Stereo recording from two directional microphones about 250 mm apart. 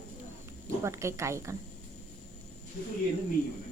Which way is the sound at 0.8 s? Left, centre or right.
Centre.